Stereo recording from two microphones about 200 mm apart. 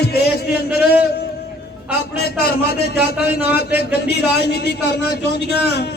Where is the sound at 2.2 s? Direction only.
55° left (ahead or behind).